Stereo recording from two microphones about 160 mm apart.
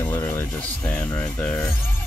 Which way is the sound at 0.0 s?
15° left (ahead or behind).